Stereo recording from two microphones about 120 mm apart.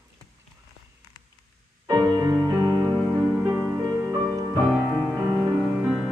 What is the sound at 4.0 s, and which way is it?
Music, 25° right (ahead or behind).